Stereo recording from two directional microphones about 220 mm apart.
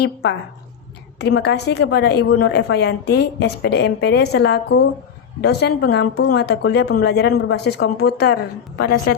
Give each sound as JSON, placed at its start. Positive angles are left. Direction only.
{"t": 0.0, "sound": "speech", "side_deg": 50}